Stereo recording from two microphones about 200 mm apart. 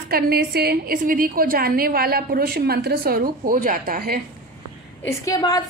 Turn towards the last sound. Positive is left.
turn(degrees=20)  # may be behind; listen again after turning